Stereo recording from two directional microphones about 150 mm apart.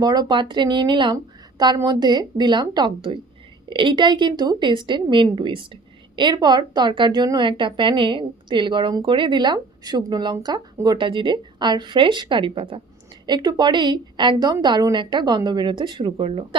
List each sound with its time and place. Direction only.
0.0 s a woman's voice: 25° right (ahead or behind)